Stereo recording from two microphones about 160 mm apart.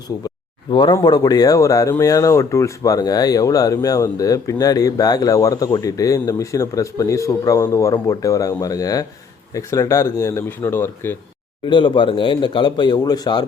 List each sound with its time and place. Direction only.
0.7 s speech: 30° left (ahead or behind)
11.6 s speech: 30° left (ahead or behind)